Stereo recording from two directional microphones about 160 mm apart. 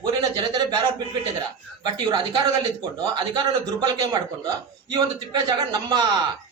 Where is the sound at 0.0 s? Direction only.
25° right (ahead or behind).